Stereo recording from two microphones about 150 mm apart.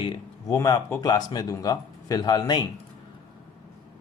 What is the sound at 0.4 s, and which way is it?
Speech, 25° left (ahead or behind).